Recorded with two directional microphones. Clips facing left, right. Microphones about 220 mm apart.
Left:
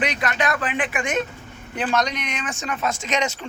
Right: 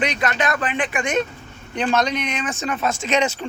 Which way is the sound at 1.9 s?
25° right (ahead or behind).